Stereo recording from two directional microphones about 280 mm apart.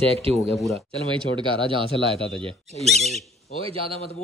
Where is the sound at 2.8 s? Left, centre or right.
Centre.